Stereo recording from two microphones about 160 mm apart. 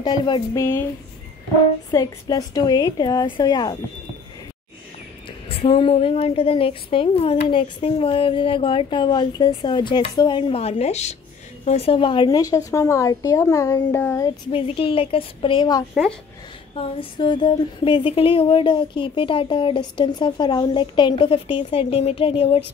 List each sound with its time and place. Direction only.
0.0 s a woman's voice: 30° left (ahead or behind)
1.9 s a woman's voice: 25° left (ahead or behind)
5.5 s a woman's voice: 35° left (ahead or behind); by 14.3 s 15° left (ahead or behind)
14.5 s speech: 35° left (ahead or behind)
15.9 s speech: centre (ahead or behind)
16.7 s speech: 35° left (ahead or behind)